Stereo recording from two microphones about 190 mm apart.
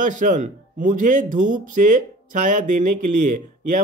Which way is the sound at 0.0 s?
40° right (ahead or behind).